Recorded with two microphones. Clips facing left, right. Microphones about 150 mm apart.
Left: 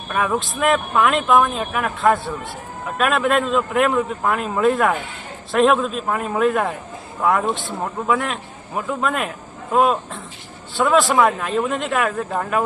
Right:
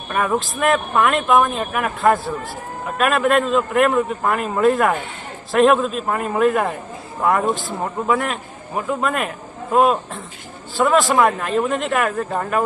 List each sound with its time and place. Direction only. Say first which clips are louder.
0.1 s speech: right 1 dB; centre (ahead or behind)